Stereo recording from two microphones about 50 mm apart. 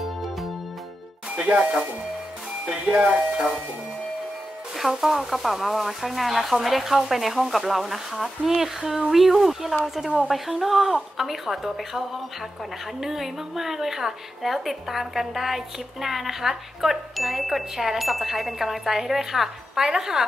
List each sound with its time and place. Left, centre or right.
1.3 s speech: right
4.7 s a woman's voice: centre